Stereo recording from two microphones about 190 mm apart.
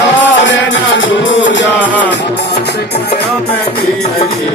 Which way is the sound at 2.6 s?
60° left (ahead or behind).